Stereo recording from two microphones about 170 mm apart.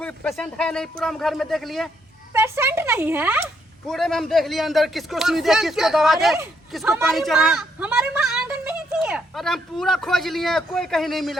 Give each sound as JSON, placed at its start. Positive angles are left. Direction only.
{"t": 0.0, "sound": "a woman's voice", "side_deg": 5}
{"t": 2.3, "sound": "speech", "side_deg": -15}
{"t": 3.8, "sound": "a woman's voice", "side_deg": 0}